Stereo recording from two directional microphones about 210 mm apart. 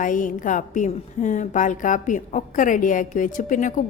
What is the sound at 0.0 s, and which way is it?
A woman's voice, 40° left (ahead or behind).